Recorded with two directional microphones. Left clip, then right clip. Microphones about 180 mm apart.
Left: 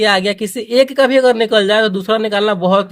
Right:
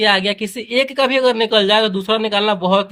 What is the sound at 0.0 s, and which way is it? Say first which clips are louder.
Speech: left 2 dB; 35° left (ahead or behind).